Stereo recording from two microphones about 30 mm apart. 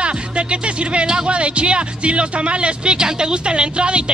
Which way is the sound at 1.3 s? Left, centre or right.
Right.